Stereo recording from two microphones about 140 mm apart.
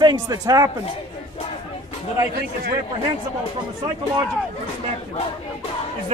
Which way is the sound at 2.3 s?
90° right.